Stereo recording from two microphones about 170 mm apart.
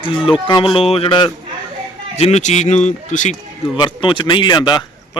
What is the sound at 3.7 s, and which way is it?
Speech, 30° left (ahead or behind).